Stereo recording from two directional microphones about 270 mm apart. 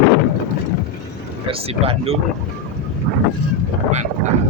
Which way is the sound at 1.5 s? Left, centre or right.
Right.